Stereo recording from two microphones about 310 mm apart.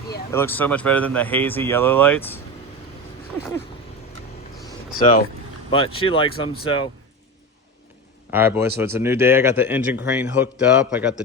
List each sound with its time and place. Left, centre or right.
0.3 s speech: centre
5.7 s speech: centre
8.3 s speech: centre